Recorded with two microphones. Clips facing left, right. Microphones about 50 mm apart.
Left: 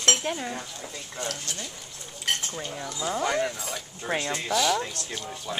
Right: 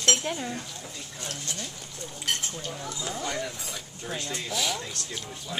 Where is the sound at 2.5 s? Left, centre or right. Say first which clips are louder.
Left 2 dB; centre.